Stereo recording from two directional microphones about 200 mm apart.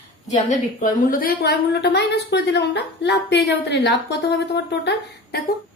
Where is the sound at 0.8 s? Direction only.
45° left (ahead or behind).